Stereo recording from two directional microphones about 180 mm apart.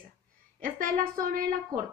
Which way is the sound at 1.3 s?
50° right (ahead or behind).